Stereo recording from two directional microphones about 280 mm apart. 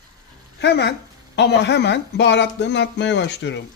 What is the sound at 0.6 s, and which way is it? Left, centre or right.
Speech, left.